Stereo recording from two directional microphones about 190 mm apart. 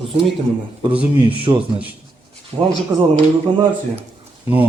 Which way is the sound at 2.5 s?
15° right (ahead or behind).